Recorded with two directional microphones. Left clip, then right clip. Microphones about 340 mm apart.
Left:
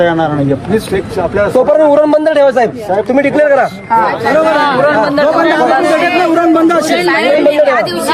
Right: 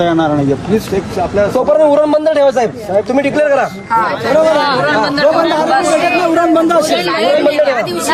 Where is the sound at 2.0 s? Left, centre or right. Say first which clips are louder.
Left 2 dB; left.